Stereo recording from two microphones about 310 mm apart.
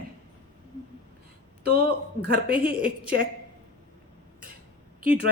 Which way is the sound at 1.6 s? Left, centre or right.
Right.